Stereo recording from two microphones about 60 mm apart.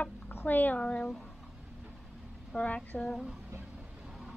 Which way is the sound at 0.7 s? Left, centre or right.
Centre.